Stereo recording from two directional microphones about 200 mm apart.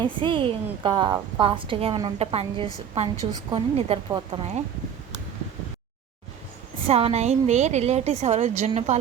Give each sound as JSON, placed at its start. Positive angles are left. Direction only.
{"t": 0.0, "sound": "a woman's voice", "side_deg": -25}
{"t": 6.8, "sound": "a woman's voice", "side_deg": -30}